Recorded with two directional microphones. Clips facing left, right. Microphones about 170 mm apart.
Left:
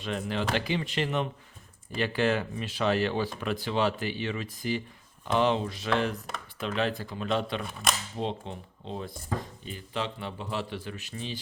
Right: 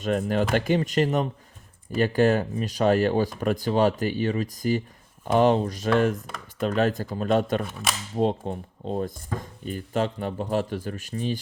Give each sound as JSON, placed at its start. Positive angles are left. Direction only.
{"t": 0.0, "sound": "a man's voice", "side_deg": -45}
{"t": 7.7, "sound": "speech", "side_deg": 0}
{"t": 8.1, "sound": "a man's voice", "side_deg": -45}